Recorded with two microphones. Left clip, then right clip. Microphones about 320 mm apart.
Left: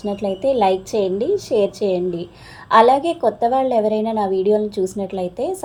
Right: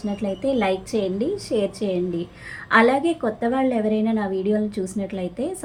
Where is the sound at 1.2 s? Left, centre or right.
Left.